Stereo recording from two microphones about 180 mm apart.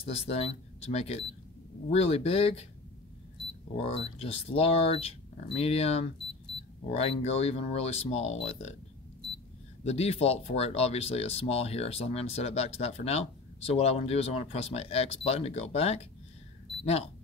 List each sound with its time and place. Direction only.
0.1 s speech: 35° left (ahead or behind)
3.7 s speech: 35° left (ahead or behind)
9.8 s speech: 35° left (ahead or behind)